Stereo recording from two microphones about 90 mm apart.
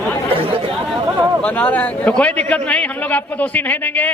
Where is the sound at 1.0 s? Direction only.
30° right (ahead or behind).